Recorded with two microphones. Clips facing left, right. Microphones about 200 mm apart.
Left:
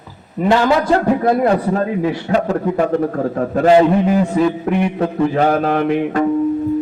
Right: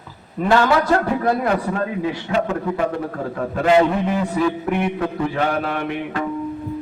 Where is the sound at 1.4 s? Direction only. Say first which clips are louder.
Left 5 dB; 35° left (ahead or behind).